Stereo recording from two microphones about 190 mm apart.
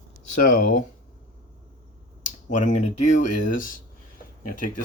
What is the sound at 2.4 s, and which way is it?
Speech, 40° left (ahead or behind).